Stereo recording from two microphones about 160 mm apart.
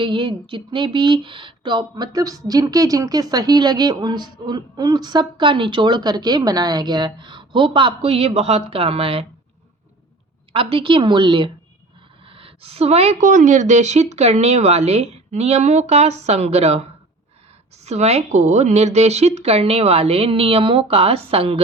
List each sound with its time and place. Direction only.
0.0 s speech: 30° right (ahead or behind)
10.5 s a woman's voice: 35° right (ahead or behind)